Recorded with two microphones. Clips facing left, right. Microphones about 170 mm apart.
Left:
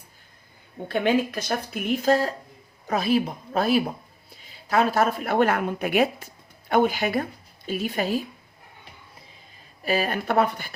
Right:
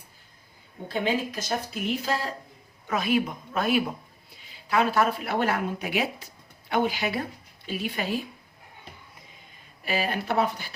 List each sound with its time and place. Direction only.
0.9 s a woman's voice: 60° left (ahead or behind); by 8.2 s 40° left (ahead or behind)
9.8 s speech: 45° left (ahead or behind)